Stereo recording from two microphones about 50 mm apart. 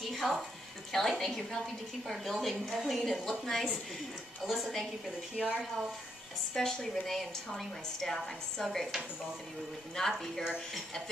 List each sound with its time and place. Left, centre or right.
0.0 s music: centre
0.9 s a woman's voice: centre
2.6 s a woman's voice: centre
5.3 s speech: centre
6.5 s a woman's voice: centre